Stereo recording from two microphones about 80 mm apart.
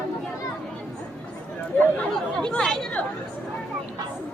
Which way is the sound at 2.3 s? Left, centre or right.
Centre.